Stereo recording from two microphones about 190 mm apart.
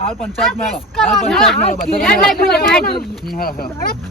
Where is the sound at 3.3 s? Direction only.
50° left (ahead or behind).